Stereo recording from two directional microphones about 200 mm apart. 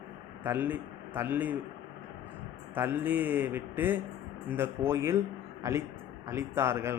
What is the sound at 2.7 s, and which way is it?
Speech, 10° right (ahead or behind).